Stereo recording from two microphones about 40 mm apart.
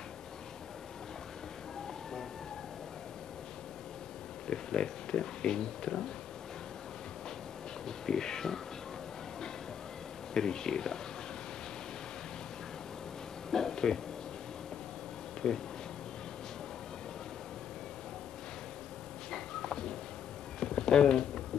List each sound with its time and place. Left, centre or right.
4.5 s speech: centre
7.8 s speech: centre
10.3 s speech: centre
13.5 s a sound: centre
15.4 s speech: centre
19.3 s a sound: centre